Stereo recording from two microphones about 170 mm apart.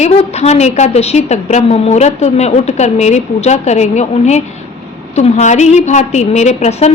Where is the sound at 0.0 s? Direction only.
40° left (ahead or behind).